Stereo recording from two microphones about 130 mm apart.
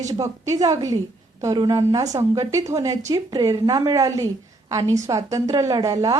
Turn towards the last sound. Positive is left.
turn(degrees=-25)  # may be behind; listen again after turning